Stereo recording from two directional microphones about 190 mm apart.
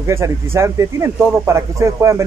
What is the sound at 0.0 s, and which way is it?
Speech, 15° right (ahead or behind).